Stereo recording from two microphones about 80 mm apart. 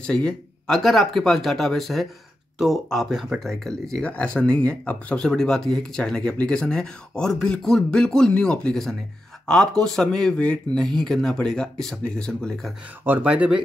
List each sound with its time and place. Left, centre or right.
0.0 s speech: centre
13.0 s speech: right